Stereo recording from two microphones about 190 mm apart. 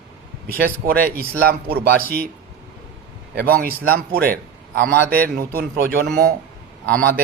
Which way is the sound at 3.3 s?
55° right (ahead or behind).